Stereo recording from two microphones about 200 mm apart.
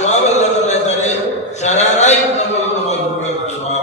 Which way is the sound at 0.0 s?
35° left (ahead or behind).